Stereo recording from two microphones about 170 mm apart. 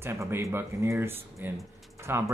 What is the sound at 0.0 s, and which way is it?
Speech, 15° right (ahead or behind).